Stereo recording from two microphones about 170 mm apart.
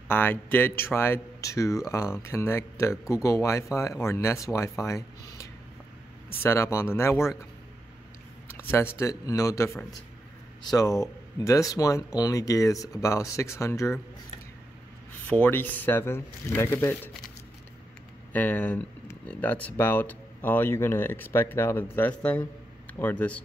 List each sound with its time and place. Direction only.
0.1 s speech: 10° left (ahead or behind)
8.5 s speech: 15° left (ahead or behind)
15.2 s speech: 10° left (ahead or behind)
18.3 s a man's voice: 10° left (ahead or behind)